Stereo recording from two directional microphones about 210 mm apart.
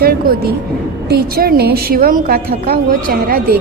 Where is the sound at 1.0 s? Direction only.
45° right (ahead or behind).